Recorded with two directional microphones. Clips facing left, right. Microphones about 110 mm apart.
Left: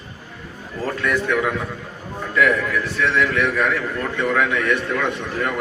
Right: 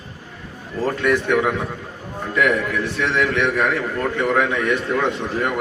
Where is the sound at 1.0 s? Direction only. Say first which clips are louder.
Right 2 dB; 20° right (ahead or behind).